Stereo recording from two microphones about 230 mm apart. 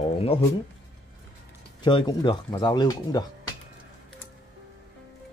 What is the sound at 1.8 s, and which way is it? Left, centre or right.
Speech, centre.